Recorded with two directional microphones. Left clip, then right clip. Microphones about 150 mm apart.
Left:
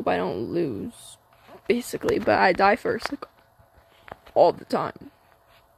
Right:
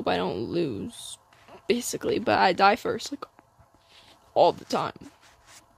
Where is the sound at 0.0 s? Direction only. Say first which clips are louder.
Left 2 dB; 25° right (ahead or behind).